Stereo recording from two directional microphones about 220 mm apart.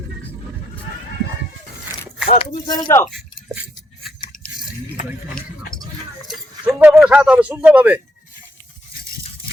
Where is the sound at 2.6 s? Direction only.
20° left (ahead or behind).